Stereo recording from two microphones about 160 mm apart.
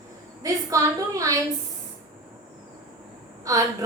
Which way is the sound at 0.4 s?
20° right (ahead or behind).